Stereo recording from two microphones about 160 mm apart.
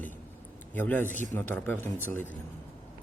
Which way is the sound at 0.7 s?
10° left (ahead or behind).